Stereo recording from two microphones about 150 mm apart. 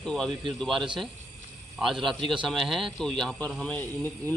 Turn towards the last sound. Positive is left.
turn(degrees=10)  # may be behind; listen again after turning